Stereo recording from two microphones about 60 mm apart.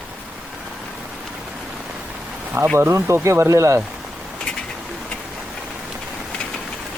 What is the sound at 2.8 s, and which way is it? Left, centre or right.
Speech, right.